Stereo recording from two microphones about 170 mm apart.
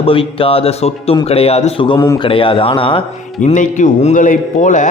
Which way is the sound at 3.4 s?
45° left (ahead or behind).